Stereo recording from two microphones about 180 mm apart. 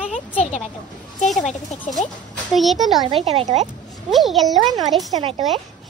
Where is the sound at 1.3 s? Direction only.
40° left (ahead or behind).